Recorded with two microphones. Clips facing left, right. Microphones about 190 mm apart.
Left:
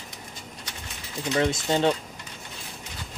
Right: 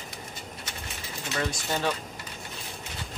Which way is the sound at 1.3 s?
25° left (ahead or behind).